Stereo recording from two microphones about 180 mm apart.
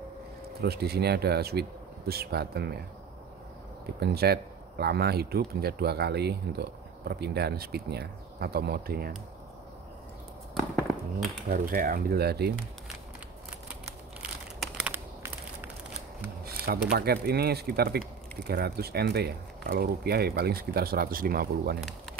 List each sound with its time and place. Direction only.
0.6 s speech: 65° right (ahead or behind)
3.8 s speech: 60° right (ahead or behind)
11.4 s speech: 50° right (ahead or behind)
14.2 s crushing: 10° right (ahead or behind)
16.9 s speech: 60° right (ahead or behind)